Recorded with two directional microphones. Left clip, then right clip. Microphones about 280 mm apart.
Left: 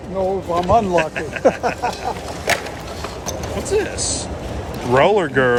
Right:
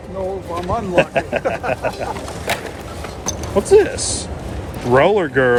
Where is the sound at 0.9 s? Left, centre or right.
Centre.